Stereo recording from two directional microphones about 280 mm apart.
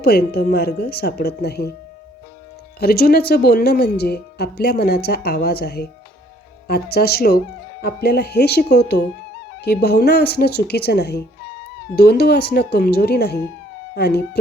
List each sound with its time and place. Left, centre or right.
0.0 s speech: left
2.8 s speech: left